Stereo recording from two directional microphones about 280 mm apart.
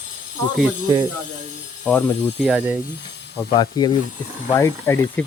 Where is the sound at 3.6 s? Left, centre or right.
Centre.